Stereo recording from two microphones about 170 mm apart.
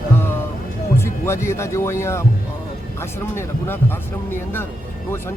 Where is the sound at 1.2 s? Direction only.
15° left (ahead or behind).